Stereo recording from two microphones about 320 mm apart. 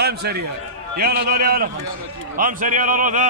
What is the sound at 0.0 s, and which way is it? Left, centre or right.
A man's voice, right.